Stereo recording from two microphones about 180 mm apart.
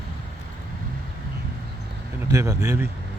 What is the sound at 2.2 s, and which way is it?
Speech, 15° right (ahead or behind).